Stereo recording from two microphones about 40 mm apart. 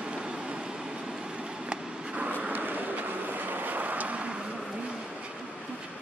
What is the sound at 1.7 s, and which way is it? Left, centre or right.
Vehicle, right.